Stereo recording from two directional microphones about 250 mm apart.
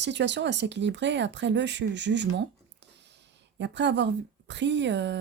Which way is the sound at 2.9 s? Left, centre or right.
Right.